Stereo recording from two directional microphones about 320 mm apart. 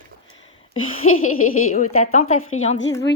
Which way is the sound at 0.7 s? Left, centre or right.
Left.